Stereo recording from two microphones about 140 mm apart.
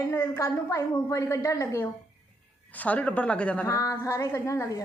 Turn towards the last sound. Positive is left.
turn(degrees=20)  # may be behind; listen again after turning